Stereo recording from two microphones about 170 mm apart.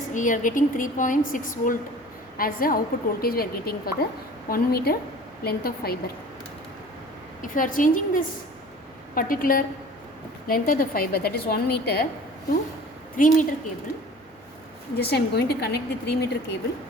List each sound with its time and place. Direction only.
0.1 s a woman's voice: 50° left (ahead or behind)
7.4 s a woman's voice: 50° left (ahead or behind); by 12.0 s 70° left (ahead or behind)
13.1 s a woman's voice: 50° left (ahead or behind)
14.9 s a woman's voice: 70° left (ahead or behind)